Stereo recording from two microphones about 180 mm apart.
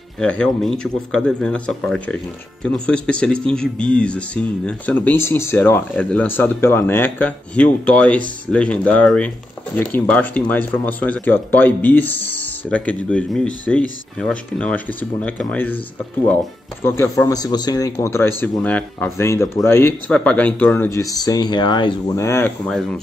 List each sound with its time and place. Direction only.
0.2 s a man's voice: 5° left (ahead or behind)
16.8 s speech: 15° left (ahead or behind)
22.7 s a man's voice: 5° left (ahead or behind)